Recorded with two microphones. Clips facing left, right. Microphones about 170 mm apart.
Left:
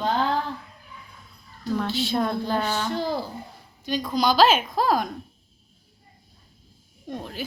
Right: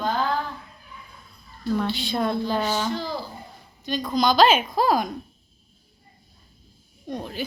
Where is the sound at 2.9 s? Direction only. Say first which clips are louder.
Left 2 dB; 55° left (ahead or behind).